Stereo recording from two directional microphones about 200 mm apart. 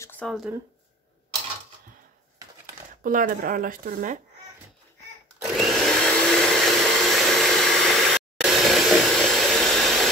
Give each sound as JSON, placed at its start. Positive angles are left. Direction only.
{"t": 0.0, "sound": "speech", "side_deg": 5}
{"t": 3.0, "sound": "speech", "side_deg": -45}
{"t": 5.6, "sound": "vacuum cleaner", "side_deg": 0}